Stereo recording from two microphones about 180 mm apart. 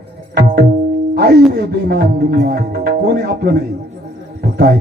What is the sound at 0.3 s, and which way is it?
Music, 55° right (ahead or behind).